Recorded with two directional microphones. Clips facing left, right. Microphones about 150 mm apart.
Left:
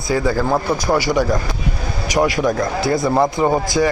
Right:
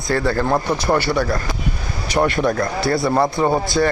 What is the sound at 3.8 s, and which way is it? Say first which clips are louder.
Speech: left 1 dB; 5° left (ahead or behind).